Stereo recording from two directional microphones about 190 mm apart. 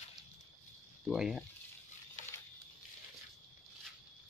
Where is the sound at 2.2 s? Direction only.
40° left (ahead or behind).